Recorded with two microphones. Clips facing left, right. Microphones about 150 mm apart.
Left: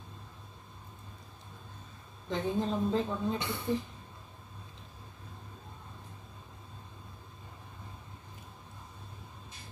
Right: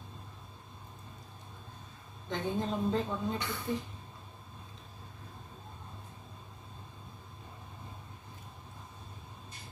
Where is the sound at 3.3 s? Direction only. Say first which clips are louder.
Left 1 dB; 30° left (ahead or behind).